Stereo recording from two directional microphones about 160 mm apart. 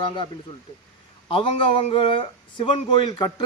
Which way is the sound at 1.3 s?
35° left (ahead or behind).